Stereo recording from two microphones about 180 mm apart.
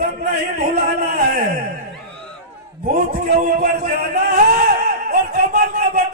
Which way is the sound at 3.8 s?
50° right (ahead or behind).